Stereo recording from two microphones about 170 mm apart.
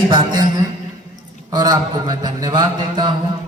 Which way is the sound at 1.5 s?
25° right (ahead or behind).